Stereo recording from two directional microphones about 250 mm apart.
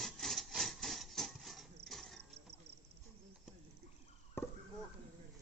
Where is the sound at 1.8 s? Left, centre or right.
Centre.